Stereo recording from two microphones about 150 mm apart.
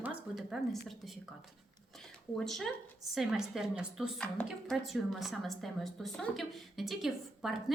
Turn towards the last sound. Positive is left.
turn(degrees=0)  # may be behind; listen again after turning